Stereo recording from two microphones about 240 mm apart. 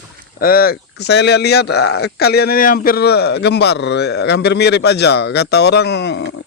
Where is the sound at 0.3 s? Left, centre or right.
Left.